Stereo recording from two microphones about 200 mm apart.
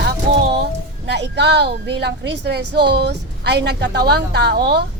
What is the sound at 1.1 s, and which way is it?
A woman's voice, 55° right (ahead or behind).